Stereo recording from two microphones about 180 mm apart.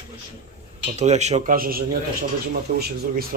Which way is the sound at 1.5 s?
55° right (ahead or behind).